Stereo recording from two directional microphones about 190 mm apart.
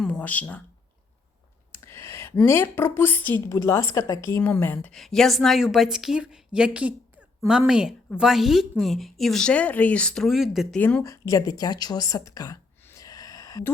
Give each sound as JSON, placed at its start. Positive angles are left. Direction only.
{"t": 0.0, "sound": "a sound", "side_deg": 5}
{"t": 1.7, "sound": "a woman's voice", "side_deg": 15}
{"t": 10.8, "sound": "speech", "side_deg": 10}